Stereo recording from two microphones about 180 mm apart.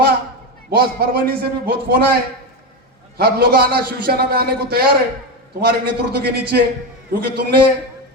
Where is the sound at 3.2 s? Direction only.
60° right (ahead or behind).